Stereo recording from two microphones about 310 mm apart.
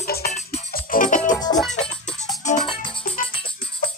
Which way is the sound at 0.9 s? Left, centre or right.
Left.